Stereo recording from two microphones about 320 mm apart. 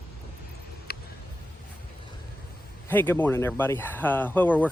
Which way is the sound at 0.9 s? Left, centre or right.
Left.